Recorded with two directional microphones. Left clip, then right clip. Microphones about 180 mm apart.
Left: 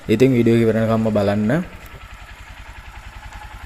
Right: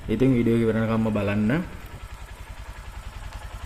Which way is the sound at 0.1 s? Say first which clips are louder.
Left 7 dB; 30° left (ahead or behind).